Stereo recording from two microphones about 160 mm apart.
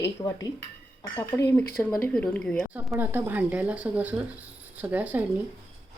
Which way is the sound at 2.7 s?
10° right (ahead or behind).